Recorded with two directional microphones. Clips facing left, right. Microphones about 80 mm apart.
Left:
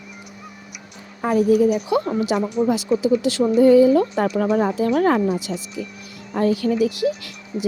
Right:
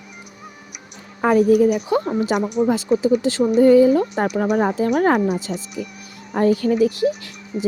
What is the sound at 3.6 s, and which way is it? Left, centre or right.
Speech, right.